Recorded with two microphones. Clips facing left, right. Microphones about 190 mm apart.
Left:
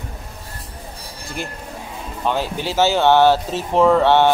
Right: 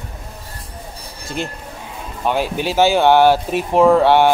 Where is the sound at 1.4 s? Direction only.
20° right (ahead or behind).